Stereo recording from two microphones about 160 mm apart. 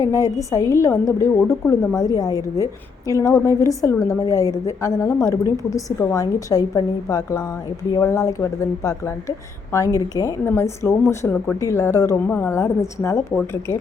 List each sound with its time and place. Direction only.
0.0 s a woman's voice: 20° left (ahead or behind)